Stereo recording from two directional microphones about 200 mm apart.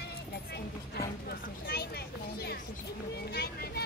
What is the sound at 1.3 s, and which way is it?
Speech, 50° left (ahead or behind).